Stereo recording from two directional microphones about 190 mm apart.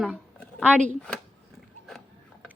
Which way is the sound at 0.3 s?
5° left (ahead or behind).